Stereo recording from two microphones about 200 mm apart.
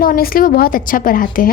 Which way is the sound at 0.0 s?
45° left (ahead or behind).